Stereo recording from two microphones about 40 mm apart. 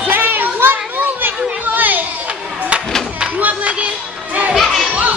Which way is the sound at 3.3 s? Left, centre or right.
Right.